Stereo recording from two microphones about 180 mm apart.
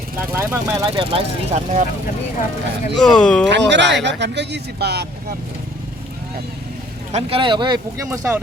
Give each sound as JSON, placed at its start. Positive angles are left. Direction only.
{"t": 0.2, "sound": "speech", "side_deg": -15}
{"t": 2.9, "sound": "speech", "side_deg": 5}
{"t": 3.5, "sound": "speech", "side_deg": -80}
{"t": 7.1, "sound": "speech", "side_deg": -35}